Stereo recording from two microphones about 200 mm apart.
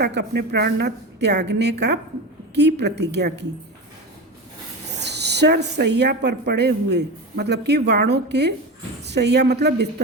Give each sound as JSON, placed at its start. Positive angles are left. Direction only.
{"t": 0.0, "sound": "speech", "side_deg": -55}
{"t": 5.0, "sound": "speech", "side_deg": -55}